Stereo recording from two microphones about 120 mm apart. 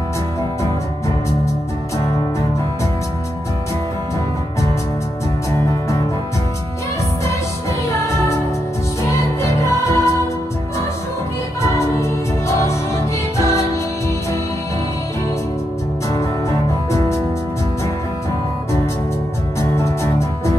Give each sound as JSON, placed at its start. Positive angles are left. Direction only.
{"t": 9.0, "sound": "music", "side_deg": 25}
{"t": 11.7, "sound": "music", "side_deg": 25}
{"t": 16.1, "sound": "music", "side_deg": 25}
{"t": 19.6, "sound": "music", "side_deg": 25}